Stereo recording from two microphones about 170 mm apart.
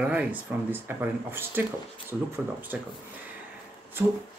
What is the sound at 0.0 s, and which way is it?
Speech, 10° right (ahead or behind).